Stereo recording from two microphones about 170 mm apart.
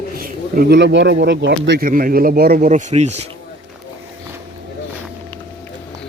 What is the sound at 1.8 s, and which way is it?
Speech, 55° right (ahead or behind).